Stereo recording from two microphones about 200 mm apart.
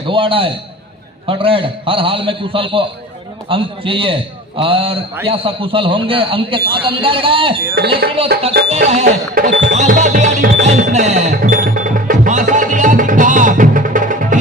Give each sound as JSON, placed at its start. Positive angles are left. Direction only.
{"t": 0.1, "sound": "a man's voice", "side_deg": -25}
{"t": 7.8, "sound": "speech", "side_deg": -55}
{"t": 8.9, "sound": "music", "side_deg": -35}